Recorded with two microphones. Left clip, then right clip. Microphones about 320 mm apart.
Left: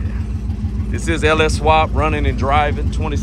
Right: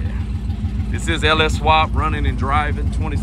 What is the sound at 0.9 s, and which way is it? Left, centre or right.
Speech, centre.